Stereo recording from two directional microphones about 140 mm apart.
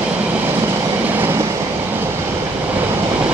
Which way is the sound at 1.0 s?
15° right (ahead or behind).